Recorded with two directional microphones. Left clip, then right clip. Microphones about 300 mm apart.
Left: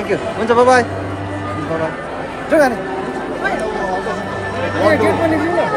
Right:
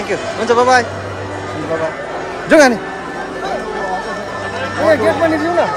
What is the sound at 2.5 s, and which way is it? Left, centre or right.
Speech, right.